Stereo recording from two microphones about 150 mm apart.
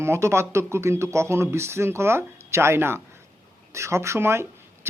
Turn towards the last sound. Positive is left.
turn(degrees=-15)  # may be behind; listen again after turning